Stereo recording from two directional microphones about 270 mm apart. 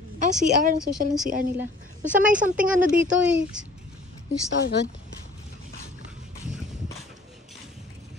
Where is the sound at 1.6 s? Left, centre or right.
Centre.